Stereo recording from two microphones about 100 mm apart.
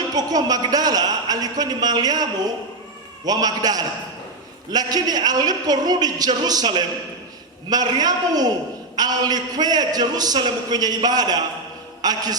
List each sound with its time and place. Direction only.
0.1 s a man's voice: 40° right (ahead or behind)